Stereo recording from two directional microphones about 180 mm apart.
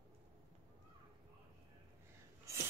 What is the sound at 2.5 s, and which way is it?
Filing, 15° right (ahead or behind).